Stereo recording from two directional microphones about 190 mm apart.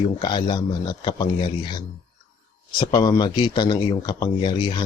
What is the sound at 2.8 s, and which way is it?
Speech, 25° left (ahead or behind).